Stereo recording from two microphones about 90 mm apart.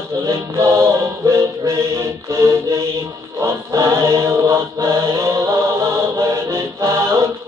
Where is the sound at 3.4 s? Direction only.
35° right (ahead or behind).